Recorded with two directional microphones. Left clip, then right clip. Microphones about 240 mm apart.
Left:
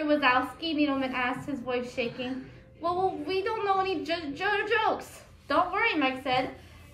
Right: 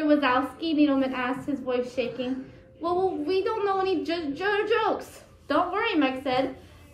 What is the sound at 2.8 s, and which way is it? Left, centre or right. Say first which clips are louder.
Child singing: right 2 dB; left.